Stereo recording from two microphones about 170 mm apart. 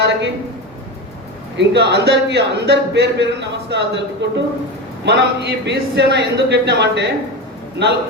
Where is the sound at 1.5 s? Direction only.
90° right.